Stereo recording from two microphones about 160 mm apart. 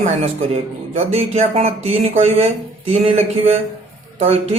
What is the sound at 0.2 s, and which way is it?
Speech, 40° right (ahead or behind).